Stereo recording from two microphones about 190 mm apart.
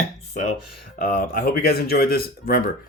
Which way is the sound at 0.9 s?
45° left (ahead or behind).